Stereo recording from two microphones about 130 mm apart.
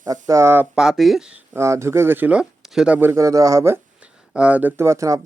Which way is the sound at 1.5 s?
20° right (ahead or behind).